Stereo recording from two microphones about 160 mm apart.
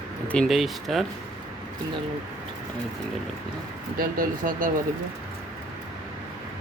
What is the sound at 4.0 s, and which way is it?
Speech, 60° right (ahead or behind).